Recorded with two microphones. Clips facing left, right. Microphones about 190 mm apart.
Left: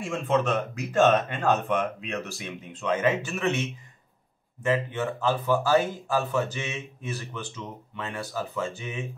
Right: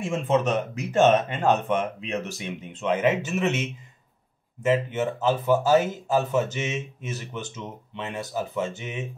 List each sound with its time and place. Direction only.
0.0 s speech: 20° right (ahead or behind)